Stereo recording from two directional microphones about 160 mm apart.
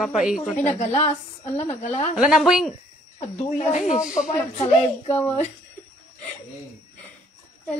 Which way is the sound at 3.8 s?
50° left (ahead or behind).